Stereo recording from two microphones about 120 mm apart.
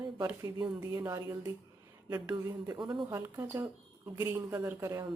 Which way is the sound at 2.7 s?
40° right (ahead or behind).